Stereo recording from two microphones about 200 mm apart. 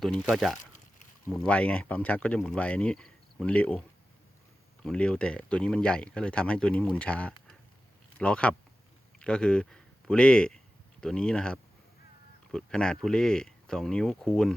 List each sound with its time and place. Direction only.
0.0 s speech: centre (ahead or behind)